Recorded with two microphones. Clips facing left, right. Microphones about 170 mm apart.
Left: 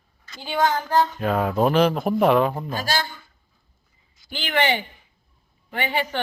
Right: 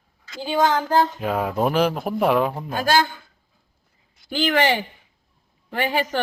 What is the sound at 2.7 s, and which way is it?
Speech, 55° right (ahead or behind).